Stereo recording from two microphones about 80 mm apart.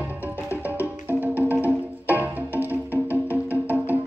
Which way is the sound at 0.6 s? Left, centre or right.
Right.